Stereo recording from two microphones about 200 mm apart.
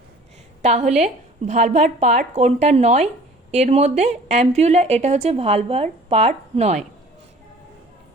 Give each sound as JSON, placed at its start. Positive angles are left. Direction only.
{"t": 0.6, "sound": "a woman's voice", "side_deg": -35}